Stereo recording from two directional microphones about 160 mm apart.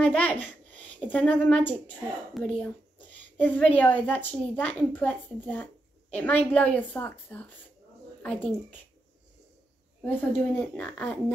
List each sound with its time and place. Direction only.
0.0 s a woman's voice: 10° left (ahead or behind)
10.0 s a woman's voice: 10° left (ahead or behind)